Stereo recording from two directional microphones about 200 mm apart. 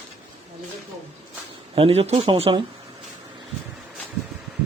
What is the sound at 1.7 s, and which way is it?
Speech, 30° right (ahead or behind).